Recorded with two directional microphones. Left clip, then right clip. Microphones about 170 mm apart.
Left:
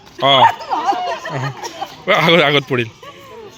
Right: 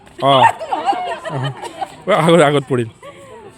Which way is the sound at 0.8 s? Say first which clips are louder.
Even; 5° right (ahead or behind).